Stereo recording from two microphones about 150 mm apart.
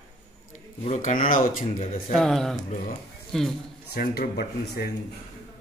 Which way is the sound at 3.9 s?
80° left.